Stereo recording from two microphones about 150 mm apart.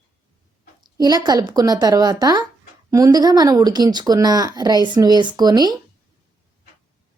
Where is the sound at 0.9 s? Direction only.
25° right (ahead or behind).